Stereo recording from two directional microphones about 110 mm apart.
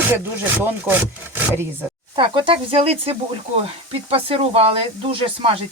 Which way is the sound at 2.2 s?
55° right (ahead or behind).